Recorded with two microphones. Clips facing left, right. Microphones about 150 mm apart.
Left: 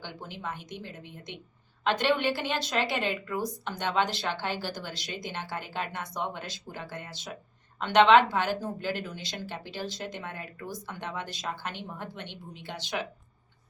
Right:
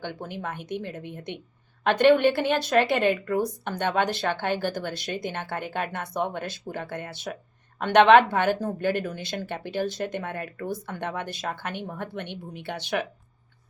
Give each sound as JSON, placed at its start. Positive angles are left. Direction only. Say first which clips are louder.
{"t": 0.0, "sound": "a woman's voice", "louder": "right 5 dB", "side_deg": -55}